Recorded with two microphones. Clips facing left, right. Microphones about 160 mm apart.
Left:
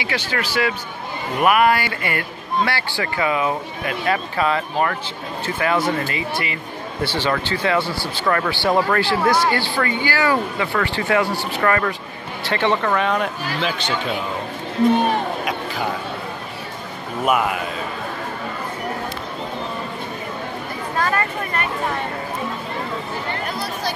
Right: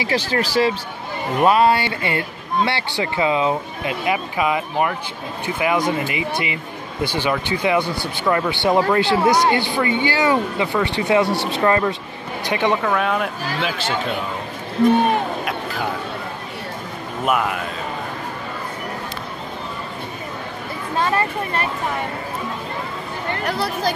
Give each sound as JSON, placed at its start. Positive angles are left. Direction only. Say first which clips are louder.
{"t": 0.0, "sound": "speech", "louder": "right 4 dB", "side_deg": -35}
{"t": 12.9, "sound": "speech", "louder": "even", "side_deg": -5}
{"t": 15.4, "sound": "a sound", "louder": "even", "side_deg": 0}
{"t": 17.2, "sound": "speech", "louder": "left 1 dB", "side_deg": 0}
{"t": 21.0, "sound": "speech", "louder": "right 2 dB", "side_deg": -25}